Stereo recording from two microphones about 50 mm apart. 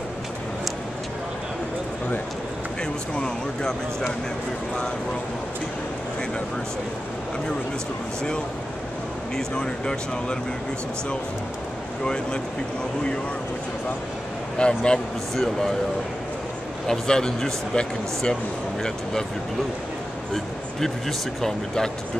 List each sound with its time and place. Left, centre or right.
12.0 s speech: centre
14.6 s speech: centre
16.8 s speech: centre
21.4 s speech: centre